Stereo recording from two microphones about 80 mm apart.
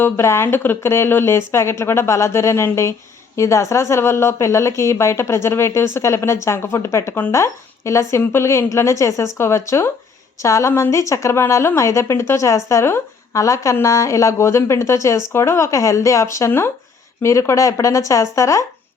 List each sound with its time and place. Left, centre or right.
0.0 s speech: left